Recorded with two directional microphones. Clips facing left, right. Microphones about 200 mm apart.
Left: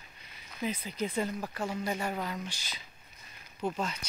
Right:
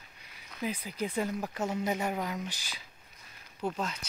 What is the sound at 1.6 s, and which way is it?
Speech, 20° right (ahead or behind).